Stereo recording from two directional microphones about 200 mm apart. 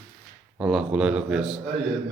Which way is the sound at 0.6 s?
5° right (ahead or behind).